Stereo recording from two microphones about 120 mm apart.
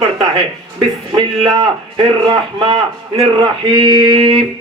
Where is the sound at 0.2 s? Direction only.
50° right (ahead or behind).